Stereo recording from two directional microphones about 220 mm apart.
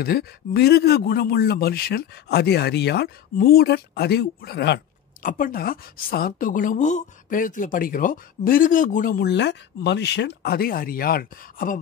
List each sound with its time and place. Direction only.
0.0 s a man's voice: 45° left (ahead or behind)